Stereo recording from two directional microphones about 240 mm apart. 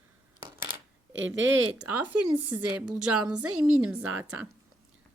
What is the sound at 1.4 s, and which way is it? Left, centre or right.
Speech, right.